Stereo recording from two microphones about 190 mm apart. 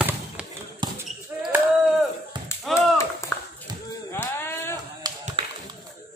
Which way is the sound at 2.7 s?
15° left (ahead or behind).